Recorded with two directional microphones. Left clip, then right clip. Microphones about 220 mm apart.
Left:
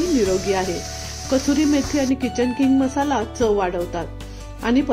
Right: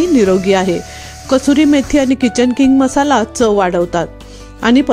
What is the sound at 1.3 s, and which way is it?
Speech, 45° right (ahead or behind).